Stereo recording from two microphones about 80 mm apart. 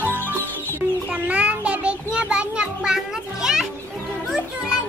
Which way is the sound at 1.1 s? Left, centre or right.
Centre.